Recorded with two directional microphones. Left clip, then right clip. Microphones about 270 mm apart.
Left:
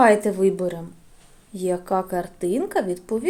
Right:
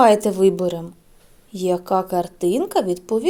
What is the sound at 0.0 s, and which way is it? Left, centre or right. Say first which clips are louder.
Speech: right 3 dB; centre.